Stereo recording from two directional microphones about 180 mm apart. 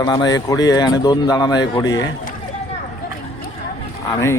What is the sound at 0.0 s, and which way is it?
Speech, 20° left (ahead or behind).